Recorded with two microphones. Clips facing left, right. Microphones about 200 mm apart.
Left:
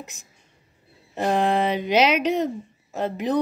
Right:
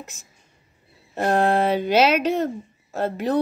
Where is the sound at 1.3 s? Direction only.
50° right (ahead or behind).